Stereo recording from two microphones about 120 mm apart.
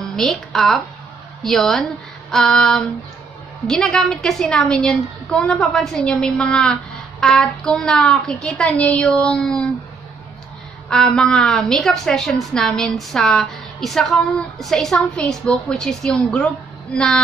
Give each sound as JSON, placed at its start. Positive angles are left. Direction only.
{"t": 0.0, "sound": "a woman's voice", "side_deg": 0}
{"t": 10.9, "sound": "a woman's voice", "side_deg": 5}